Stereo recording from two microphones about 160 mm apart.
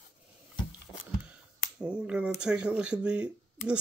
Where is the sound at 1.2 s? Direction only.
5° right (ahead or behind).